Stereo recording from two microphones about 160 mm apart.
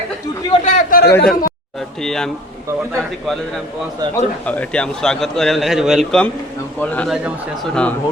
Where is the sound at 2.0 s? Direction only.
5° left (ahead or behind).